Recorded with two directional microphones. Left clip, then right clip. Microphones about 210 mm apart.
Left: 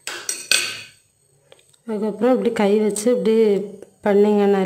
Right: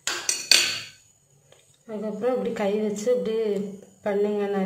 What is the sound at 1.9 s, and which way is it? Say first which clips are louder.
A woman's voice: left 7 dB; 55° left (ahead or behind).